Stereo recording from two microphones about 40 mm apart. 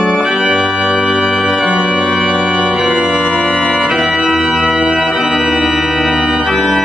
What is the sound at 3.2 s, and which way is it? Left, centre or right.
Organ, centre.